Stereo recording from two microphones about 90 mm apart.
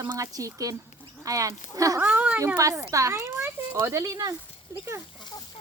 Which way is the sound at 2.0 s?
15° right (ahead or behind).